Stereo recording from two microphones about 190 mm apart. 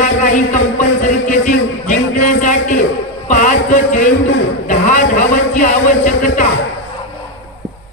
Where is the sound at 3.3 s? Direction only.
40° left (ahead or behind).